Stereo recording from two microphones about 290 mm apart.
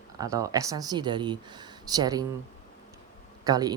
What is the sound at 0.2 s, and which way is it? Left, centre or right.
Speech, centre.